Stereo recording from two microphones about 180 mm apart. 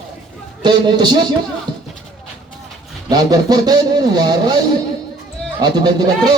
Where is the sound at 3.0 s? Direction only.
20° right (ahead or behind).